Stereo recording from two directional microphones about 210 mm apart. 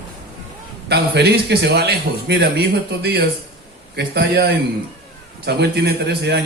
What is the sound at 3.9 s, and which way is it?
A man's voice, 50° right (ahead or behind).